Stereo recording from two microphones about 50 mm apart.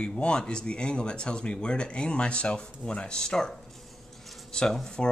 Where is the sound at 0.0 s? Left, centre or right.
Centre.